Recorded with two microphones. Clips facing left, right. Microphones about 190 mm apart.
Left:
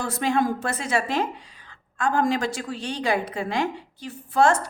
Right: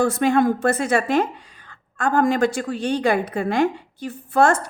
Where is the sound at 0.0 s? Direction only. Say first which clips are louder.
Right 6 dB; 55° right (ahead or behind).